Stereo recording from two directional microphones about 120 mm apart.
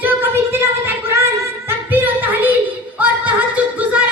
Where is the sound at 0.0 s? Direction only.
15° right (ahead or behind).